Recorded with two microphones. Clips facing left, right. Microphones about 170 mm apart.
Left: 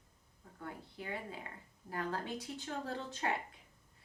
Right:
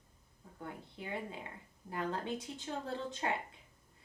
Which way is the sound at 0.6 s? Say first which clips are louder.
Even; 25° right (ahead or behind).